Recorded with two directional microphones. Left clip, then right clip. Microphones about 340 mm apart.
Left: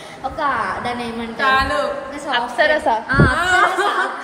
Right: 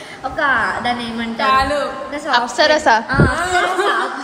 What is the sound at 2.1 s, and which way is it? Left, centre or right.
Speech, right.